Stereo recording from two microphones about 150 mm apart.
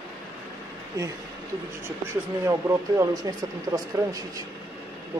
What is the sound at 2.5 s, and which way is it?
Speech, 20° right (ahead or behind).